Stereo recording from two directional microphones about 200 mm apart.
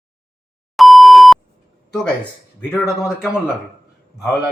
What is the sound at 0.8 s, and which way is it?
Beep, centre (ahead or behind).